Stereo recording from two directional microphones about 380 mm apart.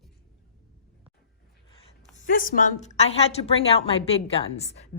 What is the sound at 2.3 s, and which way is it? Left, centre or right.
A woman's voice, left.